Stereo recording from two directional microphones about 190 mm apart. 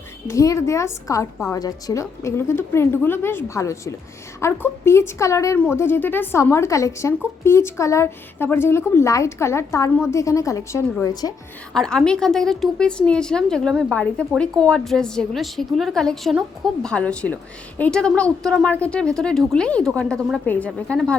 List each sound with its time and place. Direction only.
0.3 s a woman's voice: 15° left (ahead or behind)
11.7 s a woman's voice: 5° left (ahead or behind)